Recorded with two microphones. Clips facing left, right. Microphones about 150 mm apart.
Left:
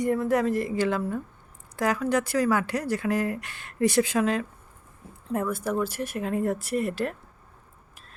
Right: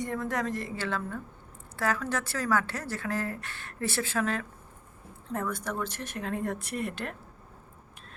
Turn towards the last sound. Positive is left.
turn(degrees=0)  # may be behind; listen again after turning